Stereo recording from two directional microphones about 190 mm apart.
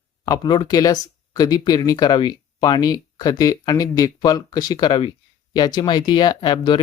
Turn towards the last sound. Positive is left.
turn(degrees=25)  # may be behind; listen again after turning